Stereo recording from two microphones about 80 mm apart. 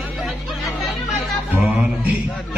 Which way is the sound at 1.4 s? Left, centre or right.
Centre.